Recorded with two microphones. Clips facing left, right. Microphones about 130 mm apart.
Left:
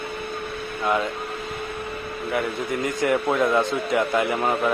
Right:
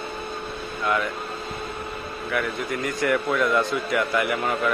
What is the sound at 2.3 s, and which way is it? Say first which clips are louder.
A man's voice: left 1 dB; 25° left (ahead or behind).